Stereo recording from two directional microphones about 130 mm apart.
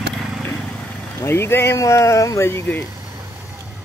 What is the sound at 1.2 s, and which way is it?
Speech, 20° left (ahead or behind).